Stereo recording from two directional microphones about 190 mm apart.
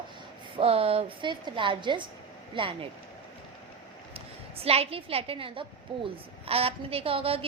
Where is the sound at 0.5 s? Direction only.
30° right (ahead or behind).